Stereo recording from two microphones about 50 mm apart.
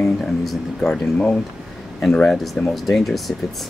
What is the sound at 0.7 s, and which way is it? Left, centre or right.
Speech, centre.